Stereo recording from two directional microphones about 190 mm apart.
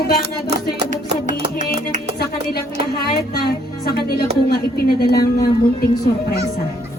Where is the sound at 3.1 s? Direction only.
55° left (ahead or behind).